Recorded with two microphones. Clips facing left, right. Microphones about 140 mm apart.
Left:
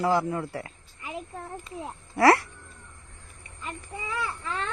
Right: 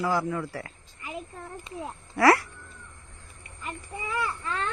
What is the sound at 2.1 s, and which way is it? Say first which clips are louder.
Speech: left 1 dB; 25° left (ahead or behind).